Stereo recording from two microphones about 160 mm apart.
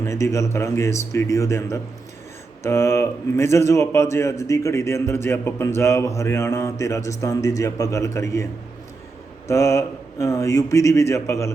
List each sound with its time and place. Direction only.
0.0 s a man's voice: 20° left (ahead or behind)
9.5 s speech: 15° left (ahead or behind)